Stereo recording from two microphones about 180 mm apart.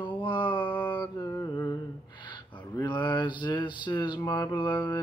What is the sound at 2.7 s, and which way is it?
Mantra, 25° left (ahead or behind).